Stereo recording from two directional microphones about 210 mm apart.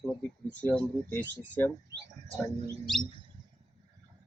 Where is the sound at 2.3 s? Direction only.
35° right (ahead or behind).